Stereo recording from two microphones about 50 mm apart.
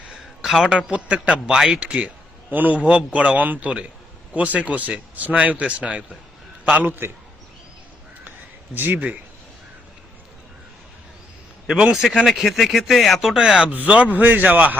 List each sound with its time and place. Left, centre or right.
0.4 s a man's voice: centre
0.7 s speech: right
1.5 s a man's voice: centre
1.8 s speech: right
2.5 s speech: right
6.7 s a man's voice: right
8.7 s speech: right
12.2 s speech: centre
13.4 s speech: centre